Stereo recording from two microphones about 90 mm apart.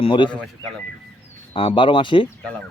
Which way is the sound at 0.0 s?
65° left (ahead or behind).